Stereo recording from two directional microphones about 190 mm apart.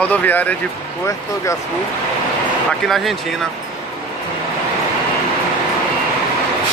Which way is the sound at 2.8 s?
Centre (ahead or behind).